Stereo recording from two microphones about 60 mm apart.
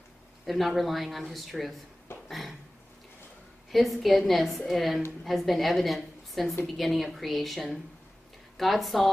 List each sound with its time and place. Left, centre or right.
0.5 s speech: centre
2.2 s a sound: centre
3.7 s speech: centre